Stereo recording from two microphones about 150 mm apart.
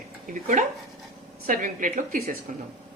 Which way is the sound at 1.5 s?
60° right (ahead or behind).